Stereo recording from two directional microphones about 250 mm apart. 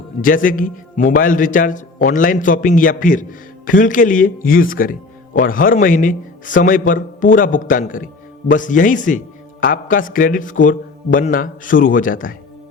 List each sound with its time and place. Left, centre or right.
0.2 s speech: left